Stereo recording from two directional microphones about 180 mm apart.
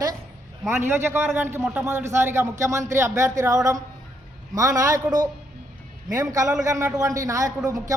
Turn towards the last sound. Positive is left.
turn(degrees=-20)  # may be behind; listen again after turning